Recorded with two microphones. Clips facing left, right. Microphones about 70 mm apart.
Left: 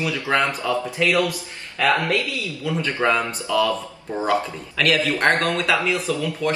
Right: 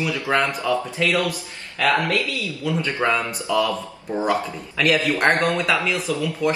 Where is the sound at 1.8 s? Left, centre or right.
Left.